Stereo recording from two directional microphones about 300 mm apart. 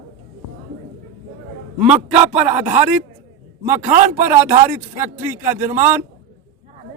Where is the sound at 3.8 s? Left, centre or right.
Right.